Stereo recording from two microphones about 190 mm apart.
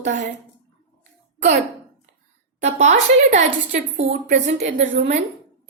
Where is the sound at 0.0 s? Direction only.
40° right (ahead or behind).